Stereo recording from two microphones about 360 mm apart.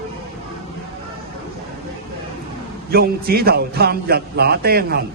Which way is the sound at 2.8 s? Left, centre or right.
Right.